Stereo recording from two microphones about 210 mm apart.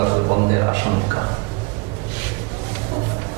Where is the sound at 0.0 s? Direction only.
30° right (ahead or behind).